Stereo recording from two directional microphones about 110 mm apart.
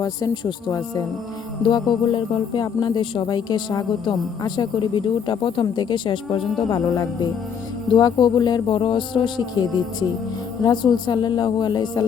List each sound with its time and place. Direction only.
1.6 s speech: 45° left (ahead or behind)
6.6 s speech: 35° left (ahead or behind)